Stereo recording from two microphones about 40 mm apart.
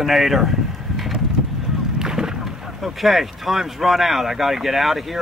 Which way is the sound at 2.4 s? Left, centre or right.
Centre.